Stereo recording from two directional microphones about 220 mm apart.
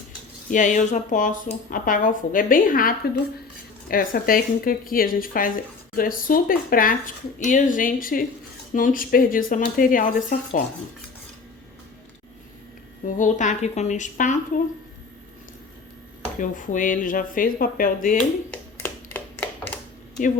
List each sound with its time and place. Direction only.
0.5 s speech: 35° left (ahead or behind)
13.1 s speech: 35° left (ahead or behind)
16.4 s speech: 35° left (ahead or behind)
18.5 s a sound: 5° left (ahead or behind)